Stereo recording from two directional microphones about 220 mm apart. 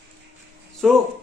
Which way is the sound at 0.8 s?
Centre (ahead or behind).